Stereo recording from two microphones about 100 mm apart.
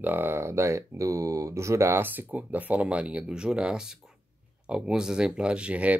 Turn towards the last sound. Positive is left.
turn(degrees=-15)  # may be behind; listen again after turning